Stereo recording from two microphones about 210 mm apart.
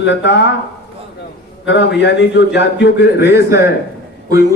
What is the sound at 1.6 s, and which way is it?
A man's voice, 55° left (ahead or behind).